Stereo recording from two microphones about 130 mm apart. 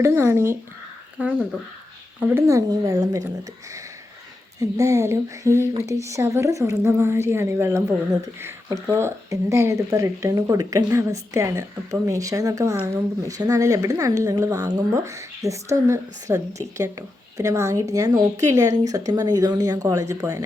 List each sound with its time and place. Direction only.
0.0 s speech: 20° right (ahead or behind)
4.6 s speech: 25° right (ahead or behind)